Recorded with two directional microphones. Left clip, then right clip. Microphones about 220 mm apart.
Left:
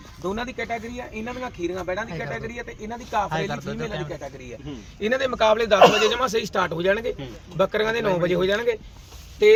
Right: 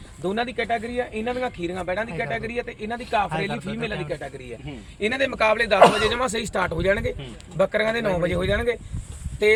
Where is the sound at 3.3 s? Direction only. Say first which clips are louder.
Even; 15° left (ahead or behind).